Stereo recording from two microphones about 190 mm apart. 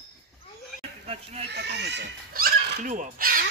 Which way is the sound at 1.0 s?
30° right (ahead or behind).